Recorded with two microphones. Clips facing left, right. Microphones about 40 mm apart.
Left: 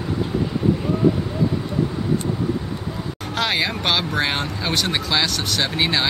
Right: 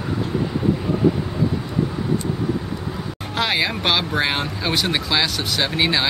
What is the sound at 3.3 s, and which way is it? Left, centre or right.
Speech, centre.